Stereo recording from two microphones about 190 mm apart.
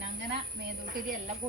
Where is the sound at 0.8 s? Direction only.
45° right (ahead or behind).